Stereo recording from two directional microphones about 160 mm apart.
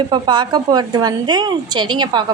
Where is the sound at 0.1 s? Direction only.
30° right (ahead or behind).